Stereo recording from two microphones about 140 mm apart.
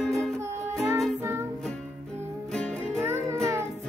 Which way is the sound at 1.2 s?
20° right (ahead or behind).